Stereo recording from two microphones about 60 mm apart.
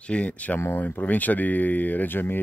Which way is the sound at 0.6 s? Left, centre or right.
Left.